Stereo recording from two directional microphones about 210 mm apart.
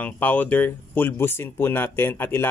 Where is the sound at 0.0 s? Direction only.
5° left (ahead or behind).